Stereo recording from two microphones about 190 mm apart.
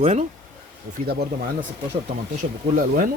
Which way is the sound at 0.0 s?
35° right (ahead or behind).